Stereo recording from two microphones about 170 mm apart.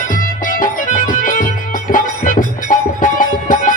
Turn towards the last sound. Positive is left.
turn(degrees=50)  # may be behind; listen again after turning